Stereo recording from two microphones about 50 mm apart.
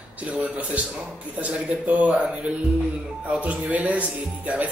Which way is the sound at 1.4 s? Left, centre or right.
Right.